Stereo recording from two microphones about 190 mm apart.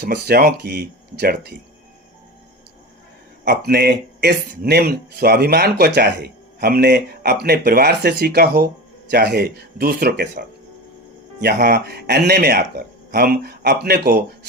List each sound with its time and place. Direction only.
0.0 s speech: 60° right (ahead or behind)
3.4 s speech: 60° right (ahead or behind)